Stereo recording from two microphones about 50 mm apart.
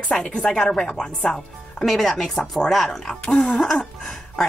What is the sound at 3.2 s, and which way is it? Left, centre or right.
Speech, left.